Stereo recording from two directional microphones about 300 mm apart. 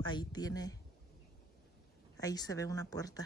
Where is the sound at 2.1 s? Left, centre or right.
Centre.